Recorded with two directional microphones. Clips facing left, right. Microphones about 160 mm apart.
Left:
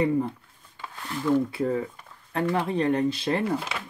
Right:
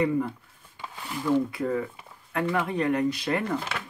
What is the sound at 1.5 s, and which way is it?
Speech, 30° left (ahead or behind).